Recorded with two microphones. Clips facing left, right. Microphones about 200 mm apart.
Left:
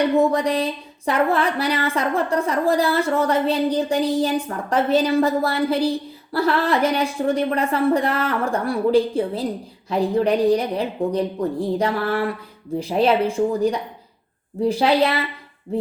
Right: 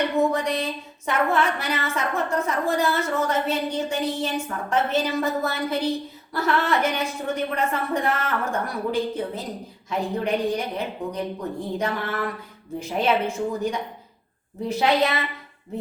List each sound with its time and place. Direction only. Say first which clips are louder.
0.2 s a woman's voice: left 4 dB; 35° left (ahead or behind)